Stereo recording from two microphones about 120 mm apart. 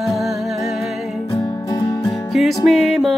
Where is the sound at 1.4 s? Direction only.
35° left (ahead or behind).